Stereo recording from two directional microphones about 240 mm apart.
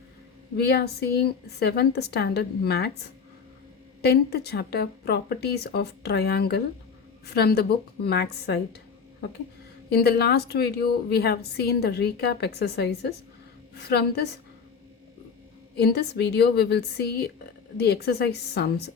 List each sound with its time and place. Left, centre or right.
0.5 s a woman's voice: left
4.0 s a woman's voice: left
9.9 s a woman's voice: left
15.8 s a woman's voice: left